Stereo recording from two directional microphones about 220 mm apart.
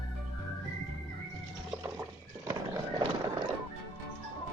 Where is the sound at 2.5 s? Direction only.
15° right (ahead or behind).